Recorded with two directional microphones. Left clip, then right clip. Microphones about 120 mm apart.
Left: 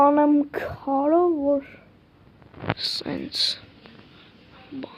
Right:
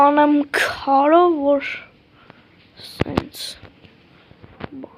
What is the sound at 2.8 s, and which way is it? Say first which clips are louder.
Speech: right 9 dB; 15° left (ahead or behind).